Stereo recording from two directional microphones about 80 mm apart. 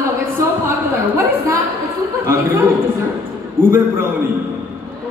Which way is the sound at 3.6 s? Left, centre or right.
Right.